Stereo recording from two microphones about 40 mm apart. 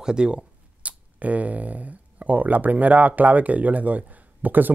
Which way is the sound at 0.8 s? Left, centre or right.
Right.